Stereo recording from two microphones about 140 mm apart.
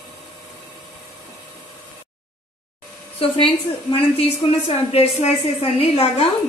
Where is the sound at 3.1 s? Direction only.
40° left (ahead or behind).